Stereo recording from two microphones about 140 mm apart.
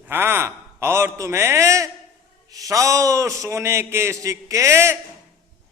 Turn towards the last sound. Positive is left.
turn(degrees=-20)  # may be behind; listen again after turning